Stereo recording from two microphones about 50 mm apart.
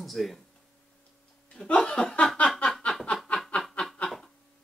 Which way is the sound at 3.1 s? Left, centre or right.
Centre.